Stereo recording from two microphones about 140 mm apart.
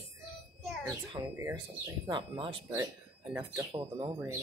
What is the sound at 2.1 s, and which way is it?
Speech, 35° right (ahead or behind).